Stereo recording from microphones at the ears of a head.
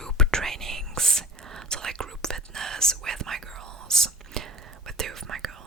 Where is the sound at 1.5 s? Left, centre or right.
Right.